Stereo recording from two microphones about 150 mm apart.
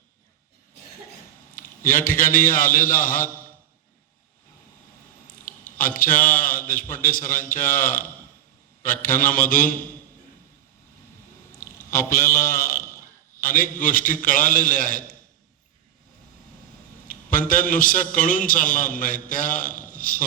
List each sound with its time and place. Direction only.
1.5 s a man's voice: 65° left (ahead or behind)
5.7 s a man's voice: 65° left (ahead or behind)
11.5 s a sound: 15° left (ahead or behind)
12.0 s a man's voice: 20° left (ahead or behind)
13.4 s a man's voice: 65° left (ahead or behind)
17.5 s a man's voice: 65° left (ahead or behind)